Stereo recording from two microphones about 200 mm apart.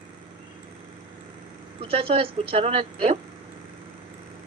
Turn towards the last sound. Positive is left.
turn(degrees=-25)  # may be behind; listen again after turning